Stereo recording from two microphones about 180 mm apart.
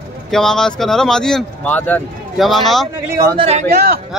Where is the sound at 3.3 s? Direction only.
35° right (ahead or behind).